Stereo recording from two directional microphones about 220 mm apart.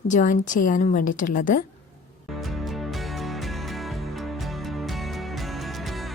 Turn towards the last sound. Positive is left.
turn(degrees=0)  # may be behind; listen again after turning